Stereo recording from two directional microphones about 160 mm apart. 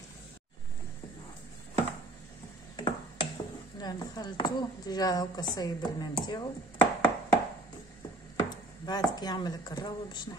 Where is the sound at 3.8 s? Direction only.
25° left (ahead or behind).